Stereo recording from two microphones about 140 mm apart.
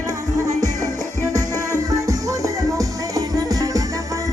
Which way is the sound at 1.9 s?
25° right (ahead or behind).